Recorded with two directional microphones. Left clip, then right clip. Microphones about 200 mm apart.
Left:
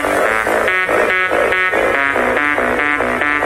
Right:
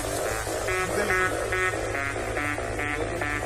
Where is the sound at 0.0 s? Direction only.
35° left (ahead or behind).